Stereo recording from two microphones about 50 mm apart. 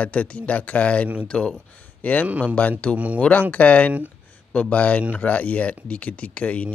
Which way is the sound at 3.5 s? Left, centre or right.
Left.